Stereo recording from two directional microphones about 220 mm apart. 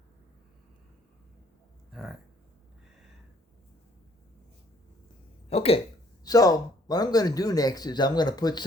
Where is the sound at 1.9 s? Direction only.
Centre (ahead or behind).